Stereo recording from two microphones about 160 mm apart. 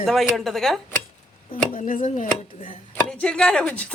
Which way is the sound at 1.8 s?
55° left (ahead or behind).